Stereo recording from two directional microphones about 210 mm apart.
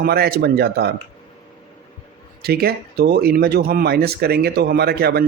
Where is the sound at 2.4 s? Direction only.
50° right (ahead or behind).